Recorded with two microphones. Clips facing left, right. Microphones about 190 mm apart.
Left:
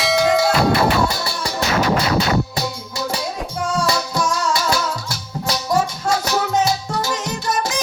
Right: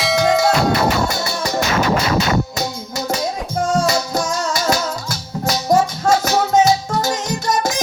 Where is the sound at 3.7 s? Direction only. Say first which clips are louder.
Right 2 dB; 45° right (ahead or behind).